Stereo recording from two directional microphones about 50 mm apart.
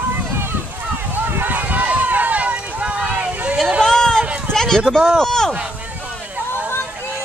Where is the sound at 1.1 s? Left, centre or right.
Right.